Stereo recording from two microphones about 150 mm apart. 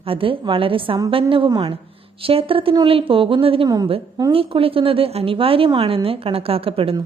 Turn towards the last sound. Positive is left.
turn(degrees=-40)  # may be behind; listen again after turning